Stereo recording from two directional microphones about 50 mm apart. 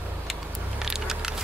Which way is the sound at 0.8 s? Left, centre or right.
Centre.